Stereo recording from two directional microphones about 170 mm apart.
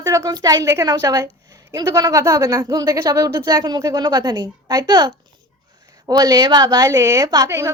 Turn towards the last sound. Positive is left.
turn(degrees=-20)  # may be behind; listen again after turning